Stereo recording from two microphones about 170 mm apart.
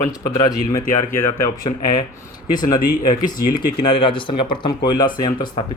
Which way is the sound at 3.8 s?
30° left (ahead or behind).